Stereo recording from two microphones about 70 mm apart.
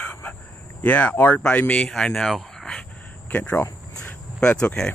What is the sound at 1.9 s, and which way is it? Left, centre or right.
Speech, centre.